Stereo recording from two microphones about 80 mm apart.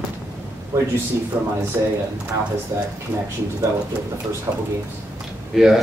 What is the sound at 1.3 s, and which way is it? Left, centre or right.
Speech, right.